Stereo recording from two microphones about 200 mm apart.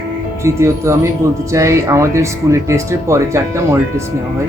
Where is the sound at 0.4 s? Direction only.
15° right (ahead or behind).